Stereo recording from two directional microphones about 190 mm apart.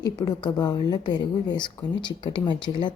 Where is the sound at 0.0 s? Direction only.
20° left (ahead or behind).